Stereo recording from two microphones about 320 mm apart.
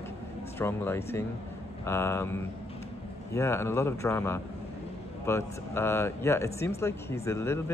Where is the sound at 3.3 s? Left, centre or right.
Centre.